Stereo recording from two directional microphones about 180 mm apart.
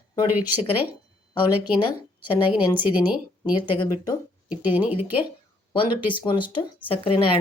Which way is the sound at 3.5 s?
25° left (ahead or behind).